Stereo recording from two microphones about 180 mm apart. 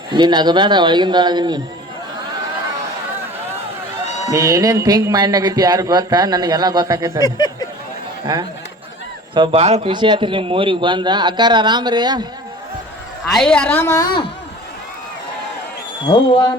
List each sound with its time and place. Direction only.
0.1 s speech: 25° right (ahead or behind)
4.3 s speech: 20° right (ahead or behind)
7.2 s speech: 20° left (ahead or behind)
9.3 s speech: 30° right (ahead or behind)
13.2 s a woman's voice: centre (ahead or behind); by 14.3 s 25° left (ahead or behind)